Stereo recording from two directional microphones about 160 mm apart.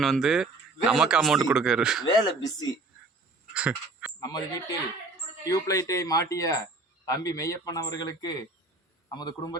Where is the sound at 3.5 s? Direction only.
10° right (ahead or behind).